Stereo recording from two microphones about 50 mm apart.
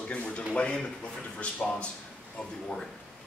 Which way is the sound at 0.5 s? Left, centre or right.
Centre.